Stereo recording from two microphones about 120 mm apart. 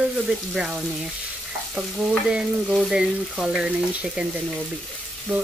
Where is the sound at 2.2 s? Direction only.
5° right (ahead or behind).